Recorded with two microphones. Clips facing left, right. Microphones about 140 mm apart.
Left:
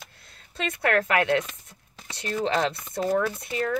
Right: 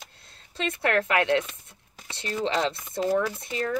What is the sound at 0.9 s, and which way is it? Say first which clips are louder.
Speech: left 1 dB; 50° left (ahead or behind).